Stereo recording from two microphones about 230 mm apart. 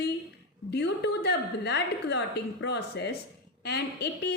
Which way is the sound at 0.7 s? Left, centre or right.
Left.